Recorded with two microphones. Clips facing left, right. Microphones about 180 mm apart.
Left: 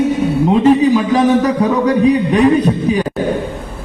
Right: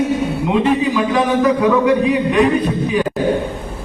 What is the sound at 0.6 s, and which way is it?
A man's voice, 40° left (ahead or behind).